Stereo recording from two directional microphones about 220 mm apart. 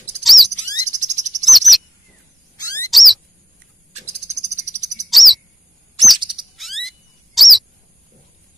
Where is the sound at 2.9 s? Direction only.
Centre (ahead or behind).